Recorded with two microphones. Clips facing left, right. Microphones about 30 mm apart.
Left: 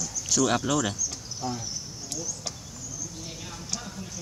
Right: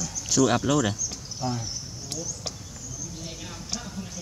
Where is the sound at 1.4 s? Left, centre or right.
Centre.